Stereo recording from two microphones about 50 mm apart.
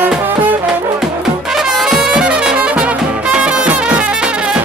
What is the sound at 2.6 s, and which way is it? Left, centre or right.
Music, right.